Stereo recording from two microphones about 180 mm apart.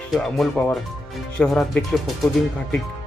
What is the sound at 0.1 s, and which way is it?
Speech, centre (ahead or behind).